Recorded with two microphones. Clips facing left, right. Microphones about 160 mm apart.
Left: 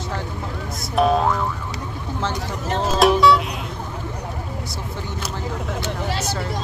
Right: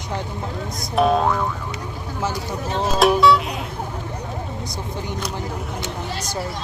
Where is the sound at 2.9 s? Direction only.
Centre (ahead or behind).